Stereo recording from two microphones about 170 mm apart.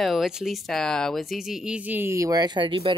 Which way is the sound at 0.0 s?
Centre (ahead or behind).